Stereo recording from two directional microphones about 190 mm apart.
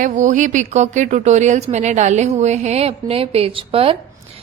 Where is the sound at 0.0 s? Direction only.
40° right (ahead or behind).